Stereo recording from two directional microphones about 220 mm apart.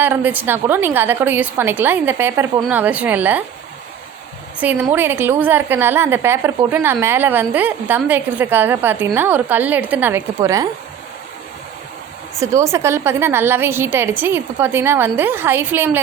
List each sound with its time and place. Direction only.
0.0 s a woman's voice: 10° right (ahead or behind)
4.6 s a woman's voice: 5° right (ahead or behind)
12.4 s a woman's voice: 15° right (ahead or behind)